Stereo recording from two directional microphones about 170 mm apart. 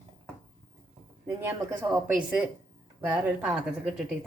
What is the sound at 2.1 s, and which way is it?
A woman's voice, 5° right (ahead or behind).